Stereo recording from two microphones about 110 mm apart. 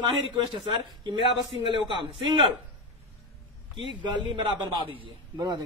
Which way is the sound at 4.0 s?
45° right (ahead or behind).